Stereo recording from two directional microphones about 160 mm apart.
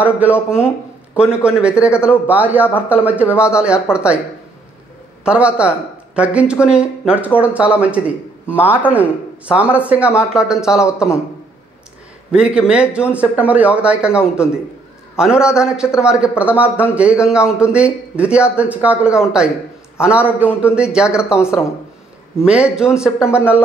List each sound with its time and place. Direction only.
0.0 s speech: 10° right (ahead or behind)
5.2 s speech: 5° right (ahead or behind)
12.3 s speech: 5° right (ahead or behind)
21.2 s speech: 15° left (ahead or behind)
22.4 s speech: 5° right (ahead or behind)